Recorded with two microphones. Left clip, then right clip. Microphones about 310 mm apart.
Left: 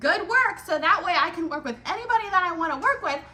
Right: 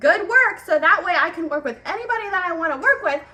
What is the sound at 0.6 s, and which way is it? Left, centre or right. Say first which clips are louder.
Speech: right 5 dB; centre.